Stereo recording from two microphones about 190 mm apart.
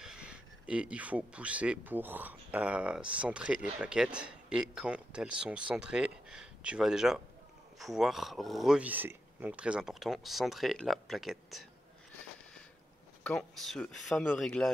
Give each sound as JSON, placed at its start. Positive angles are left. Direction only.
{"t": 0.0, "sound": "speech", "side_deg": -5}
{"t": 13.2, "sound": "speech", "side_deg": 5}